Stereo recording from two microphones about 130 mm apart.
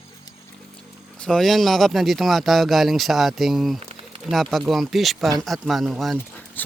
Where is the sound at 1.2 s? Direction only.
5° left (ahead or behind).